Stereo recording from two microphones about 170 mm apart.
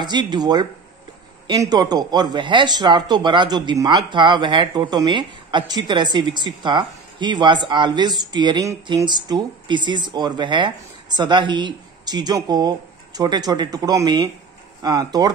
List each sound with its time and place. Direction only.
0.0 s speech: 25° right (ahead or behind)